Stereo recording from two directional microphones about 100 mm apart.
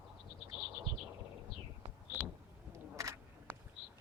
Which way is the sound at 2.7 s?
30° right (ahead or behind).